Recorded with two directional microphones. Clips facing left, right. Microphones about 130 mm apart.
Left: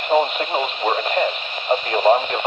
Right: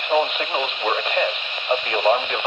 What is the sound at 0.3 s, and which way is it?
Speech, 40° left (ahead or behind).